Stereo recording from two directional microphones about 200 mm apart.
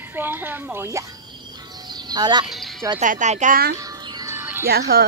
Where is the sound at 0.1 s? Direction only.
10° right (ahead or behind).